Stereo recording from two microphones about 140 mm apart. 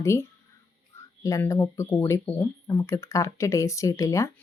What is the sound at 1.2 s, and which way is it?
Speech, 20° left (ahead or behind).